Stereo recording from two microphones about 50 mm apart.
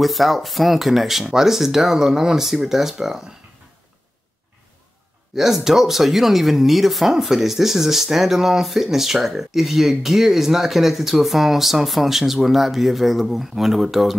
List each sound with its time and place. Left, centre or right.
0.0 s speech: centre
5.3 s speech: centre